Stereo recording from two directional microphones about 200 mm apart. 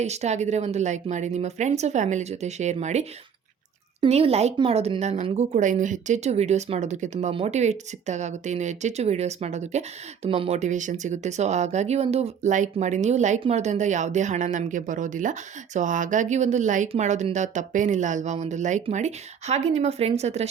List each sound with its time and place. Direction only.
0.0 s speech: 35° right (ahead or behind)